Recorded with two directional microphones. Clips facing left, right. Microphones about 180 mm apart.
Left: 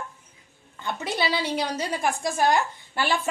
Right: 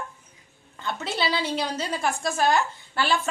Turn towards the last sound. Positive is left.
turn(degrees=15)  # may be behind; listen again after turning